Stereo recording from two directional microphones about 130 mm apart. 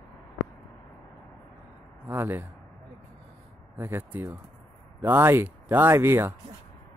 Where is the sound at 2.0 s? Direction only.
15° right (ahead or behind).